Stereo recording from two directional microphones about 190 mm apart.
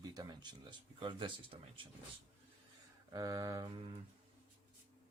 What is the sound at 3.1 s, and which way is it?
Speech, 20° right (ahead or behind).